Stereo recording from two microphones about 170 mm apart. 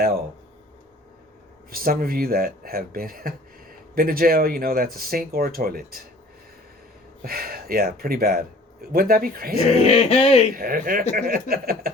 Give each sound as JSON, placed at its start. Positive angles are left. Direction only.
{"t": 1.7, "sound": "speech", "side_deg": -60}
{"t": 7.2, "sound": "speech", "side_deg": -60}
{"t": 9.8, "sound": "a sound", "side_deg": 35}
{"t": 10.5, "sound": "speech", "side_deg": -55}